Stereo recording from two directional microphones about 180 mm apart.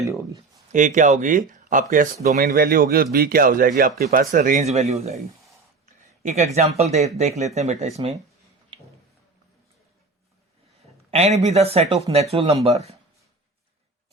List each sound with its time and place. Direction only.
0.0 s speech: 15° right (ahead or behind)
0.7 s speech: 45° right (ahead or behind)
11.1 s speech: 35° right (ahead or behind)